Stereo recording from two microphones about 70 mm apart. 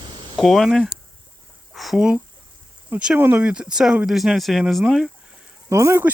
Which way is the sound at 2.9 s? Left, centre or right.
Centre.